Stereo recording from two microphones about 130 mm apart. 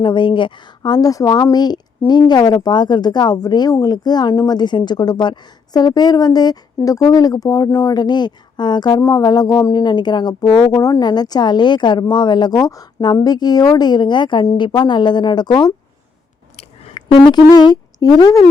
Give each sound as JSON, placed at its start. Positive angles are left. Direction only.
{"t": 0.0, "sound": "speech", "side_deg": 40}
{"t": 16.6, "sound": "chewing", "side_deg": 50}
{"t": 17.2, "sound": "speech", "side_deg": 30}